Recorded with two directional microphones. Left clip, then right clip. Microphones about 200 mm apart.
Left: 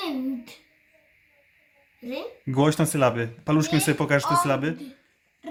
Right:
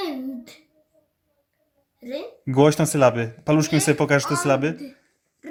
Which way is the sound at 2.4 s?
15° right (ahead or behind).